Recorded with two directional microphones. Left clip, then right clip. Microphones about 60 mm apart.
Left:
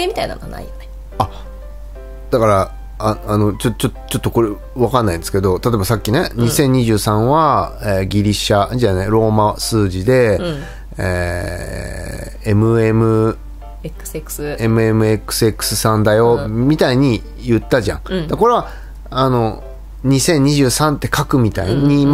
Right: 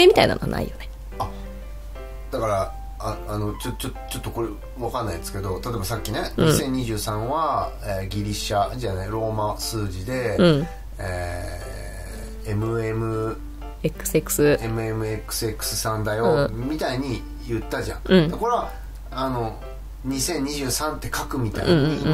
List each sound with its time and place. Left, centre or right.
0.0 s speech: right
1.2 s speech: left
10.3 s speech: right
11.0 s speech: left
13.8 s speech: right
14.6 s speech: left
16.3 s speech: right
16.6 s speech: left
18.0 s speech: right
19.0 s speech: left
20.1 s speech: left